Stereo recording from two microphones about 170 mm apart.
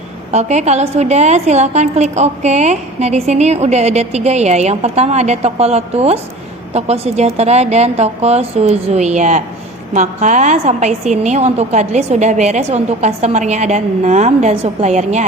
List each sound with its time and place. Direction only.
0.3 s a woman's voice: 40° right (ahead or behind)